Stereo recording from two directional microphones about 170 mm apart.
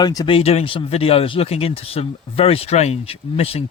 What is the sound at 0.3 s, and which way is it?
Speech, 35° left (ahead or behind).